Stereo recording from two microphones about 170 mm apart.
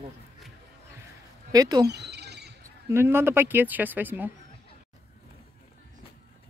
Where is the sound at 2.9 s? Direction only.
15° right (ahead or behind).